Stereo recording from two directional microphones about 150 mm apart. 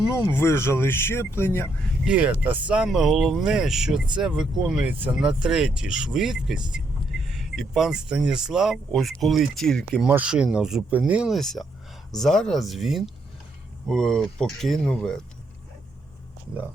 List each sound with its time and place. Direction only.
0.2 s speech: 15° left (ahead or behind)
2.0 s speech: 10° right (ahead or behind)